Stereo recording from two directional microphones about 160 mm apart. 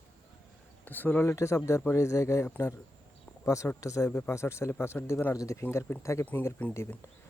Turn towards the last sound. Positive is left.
turn(degrees=10)  # may be behind; listen again after turning